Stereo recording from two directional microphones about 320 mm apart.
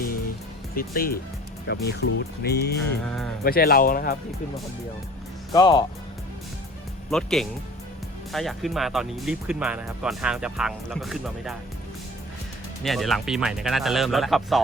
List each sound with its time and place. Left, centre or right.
0.8 s speech: left
3.0 s speech: centre
3.4 s speech: left
5.5 s speech: centre
7.1 s speech: centre
12.8 s speech: centre